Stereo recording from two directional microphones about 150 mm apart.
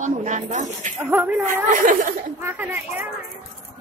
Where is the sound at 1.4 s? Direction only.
60° right (ahead or behind).